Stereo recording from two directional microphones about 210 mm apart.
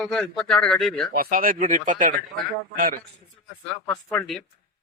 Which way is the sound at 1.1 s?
40° right (ahead or behind).